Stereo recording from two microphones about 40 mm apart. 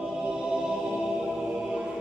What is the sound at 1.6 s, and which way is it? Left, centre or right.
Music, right.